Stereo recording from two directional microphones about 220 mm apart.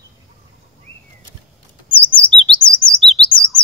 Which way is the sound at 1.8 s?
25° left (ahead or behind).